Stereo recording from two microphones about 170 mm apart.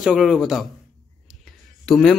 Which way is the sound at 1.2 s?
Centre (ahead or behind).